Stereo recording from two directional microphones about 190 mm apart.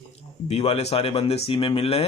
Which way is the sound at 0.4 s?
30° left (ahead or behind).